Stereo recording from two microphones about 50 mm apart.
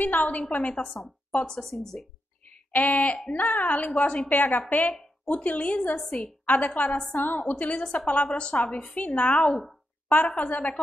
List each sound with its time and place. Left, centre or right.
0.0 s a woman's voice: left
1.4 s speech: centre
2.7 s a woman's voice: left; by 6.5 s centre
6.5 s a woman's voice: left
8.9 s a woman's voice: left
9.5 s speech: centre
10.2 s a woman's voice: left